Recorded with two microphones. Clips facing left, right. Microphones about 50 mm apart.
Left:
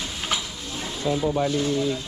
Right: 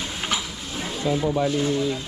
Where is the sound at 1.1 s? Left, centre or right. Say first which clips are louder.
Right 1 dB; right.